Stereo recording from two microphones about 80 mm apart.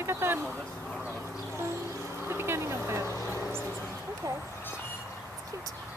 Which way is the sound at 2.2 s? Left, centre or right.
Right.